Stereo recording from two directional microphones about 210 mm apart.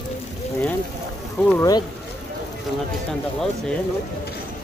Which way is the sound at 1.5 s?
15° left (ahead or behind).